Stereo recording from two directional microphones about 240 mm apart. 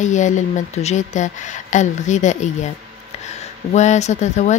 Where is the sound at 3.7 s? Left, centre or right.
Left.